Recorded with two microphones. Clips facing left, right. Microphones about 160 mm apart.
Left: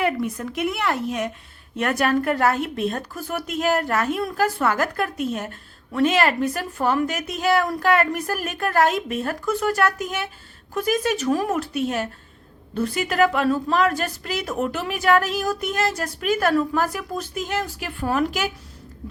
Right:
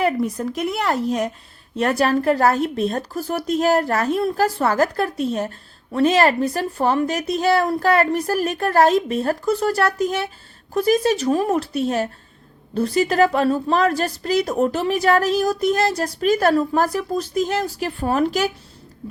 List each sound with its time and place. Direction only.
0.0 s a woman's voice: 35° right (ahead or behind)